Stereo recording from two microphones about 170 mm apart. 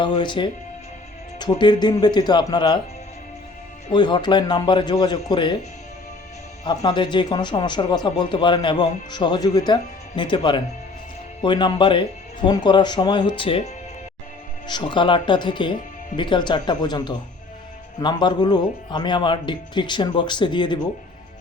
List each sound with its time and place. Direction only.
0.0 s speech: 25° left (ahead or behind)
3.9 s speech: 25° left (ahead or behind)
6.7 s speech: 30° left (ahead or behind)
14.7 s speech: 25° left (ahead or behind)